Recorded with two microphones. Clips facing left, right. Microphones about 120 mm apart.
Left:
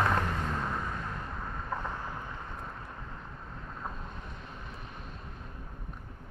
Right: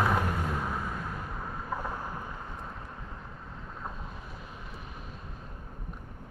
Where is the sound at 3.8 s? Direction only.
Centre (ahead or behind).